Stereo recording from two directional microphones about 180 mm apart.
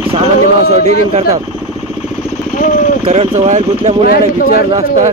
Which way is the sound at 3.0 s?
35° right (ahead or behind).